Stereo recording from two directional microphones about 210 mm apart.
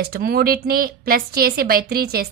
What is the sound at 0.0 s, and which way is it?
A woman's voice, 45° right (ahead or behind).